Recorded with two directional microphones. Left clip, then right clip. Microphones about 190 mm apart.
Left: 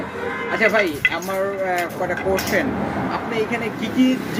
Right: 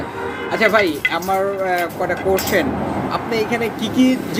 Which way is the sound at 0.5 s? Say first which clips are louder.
Right 3 dB; 15° right (ahead or behind).